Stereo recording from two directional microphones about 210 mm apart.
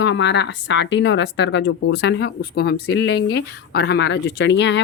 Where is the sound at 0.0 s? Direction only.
55° left (ahead or behind).